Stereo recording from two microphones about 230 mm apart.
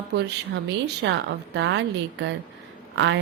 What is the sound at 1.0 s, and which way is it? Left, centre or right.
Speech, right.